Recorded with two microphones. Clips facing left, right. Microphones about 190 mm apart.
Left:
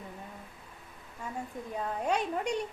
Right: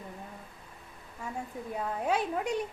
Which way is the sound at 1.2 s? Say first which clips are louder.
Right 1 dB; 5° right (ahead or behind).